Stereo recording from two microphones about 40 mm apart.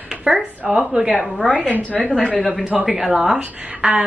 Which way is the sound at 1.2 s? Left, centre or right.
Centre.